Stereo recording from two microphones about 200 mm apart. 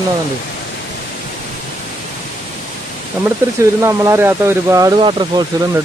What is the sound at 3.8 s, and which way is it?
Speech, 15° right (ahead or behind).